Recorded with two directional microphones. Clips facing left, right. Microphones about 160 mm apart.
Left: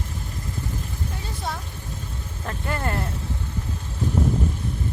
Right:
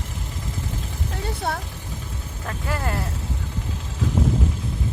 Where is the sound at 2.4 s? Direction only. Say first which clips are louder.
Even; centre (ahead or behind).